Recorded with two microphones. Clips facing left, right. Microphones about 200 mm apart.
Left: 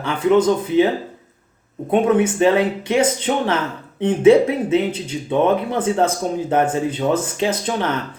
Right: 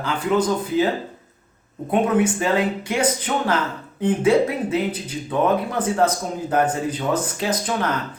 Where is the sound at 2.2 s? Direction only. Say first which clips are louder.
Left 4 dB; 25° left (ahead or behind).